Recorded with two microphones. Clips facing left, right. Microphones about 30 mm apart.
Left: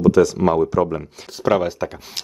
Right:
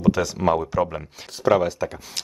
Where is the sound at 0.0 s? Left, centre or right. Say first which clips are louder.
Left 6 dB; centre.